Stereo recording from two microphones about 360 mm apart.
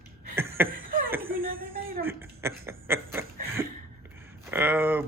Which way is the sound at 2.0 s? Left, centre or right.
Centre.